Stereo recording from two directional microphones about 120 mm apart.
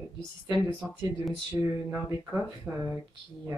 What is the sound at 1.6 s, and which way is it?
Speech, 25° right (ahead or behind).